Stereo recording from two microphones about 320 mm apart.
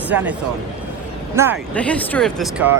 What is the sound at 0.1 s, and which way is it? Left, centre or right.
Speech, centre.